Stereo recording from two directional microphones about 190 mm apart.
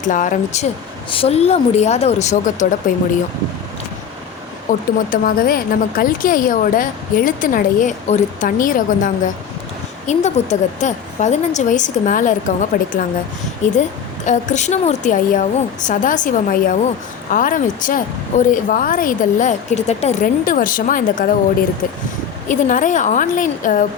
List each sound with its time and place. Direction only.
0.0 s a woman's voice: 45° left (ahead or behind)
4.7 s a woman's voice: 45° left (ahead or behind)
14.3 s a woman's voice: 40° left (ahead or behind)
22.4 s a woman's voice: 45° left (ahead or behind)